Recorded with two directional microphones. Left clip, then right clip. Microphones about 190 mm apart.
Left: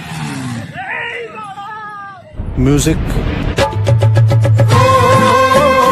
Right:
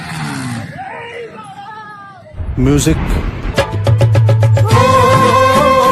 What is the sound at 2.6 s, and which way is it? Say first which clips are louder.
Speech: even; centre (ahead or behind).